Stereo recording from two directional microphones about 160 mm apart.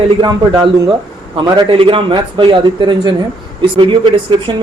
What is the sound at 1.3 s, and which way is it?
A man's voice, 35° right (ahead or behind).